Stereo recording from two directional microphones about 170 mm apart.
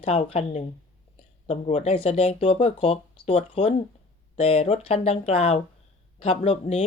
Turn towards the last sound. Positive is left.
turn(degrees=40)  # may be behind; listen again after turning